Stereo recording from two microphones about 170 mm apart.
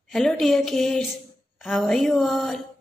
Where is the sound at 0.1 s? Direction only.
Centre (ahead or behind).